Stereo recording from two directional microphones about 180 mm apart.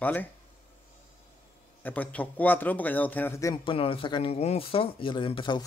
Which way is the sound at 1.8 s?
10° left (ahead or behind).